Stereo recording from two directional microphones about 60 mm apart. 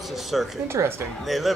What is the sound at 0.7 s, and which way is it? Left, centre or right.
Speech, right.